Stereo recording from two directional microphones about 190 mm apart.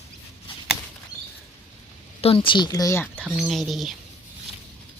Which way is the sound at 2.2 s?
30° left (ahead or behind).